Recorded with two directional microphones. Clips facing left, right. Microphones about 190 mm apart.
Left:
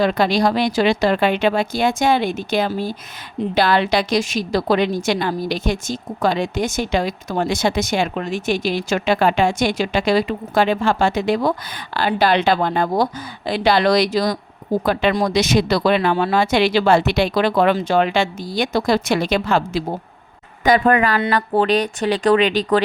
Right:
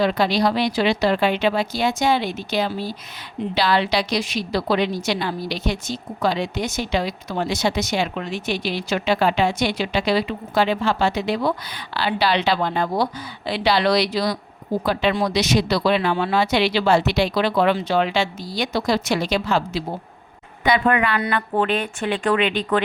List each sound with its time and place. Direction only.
0.0 s a woman's voice: 50° left (ahead or behind)
20.7 s speech: 40° left (ahead or behind)